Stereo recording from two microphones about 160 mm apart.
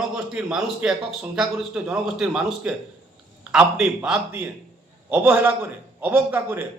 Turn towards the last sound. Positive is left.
turn(degrees=-15)  # may be behind; listen again after turning